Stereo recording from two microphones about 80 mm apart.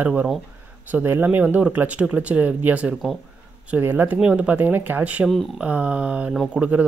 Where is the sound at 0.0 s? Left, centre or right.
Right.